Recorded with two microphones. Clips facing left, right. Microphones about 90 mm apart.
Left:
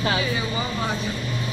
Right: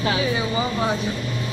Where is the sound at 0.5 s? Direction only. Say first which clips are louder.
Right 4 dB; 10° right (ahead or behind).